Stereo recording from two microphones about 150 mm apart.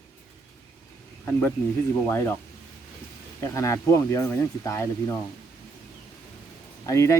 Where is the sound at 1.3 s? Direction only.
10° left (ahead or behind).